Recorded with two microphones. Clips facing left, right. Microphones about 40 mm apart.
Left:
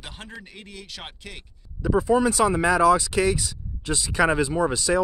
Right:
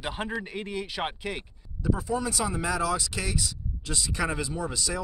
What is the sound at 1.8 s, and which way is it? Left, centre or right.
Speech, left.